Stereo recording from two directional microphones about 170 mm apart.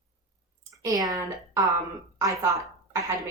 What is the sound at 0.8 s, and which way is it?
A woman's voice, 20° right (ahead or behind).